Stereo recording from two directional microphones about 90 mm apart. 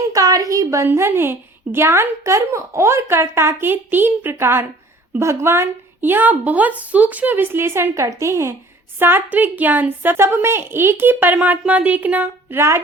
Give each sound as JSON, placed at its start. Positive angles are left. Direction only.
{"t": 0.1, "sound": "a woman's voice", "side_deg": -40}